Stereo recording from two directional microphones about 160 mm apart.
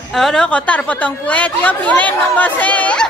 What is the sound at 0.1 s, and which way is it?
A woman's voice, 5° left (ahead or behind).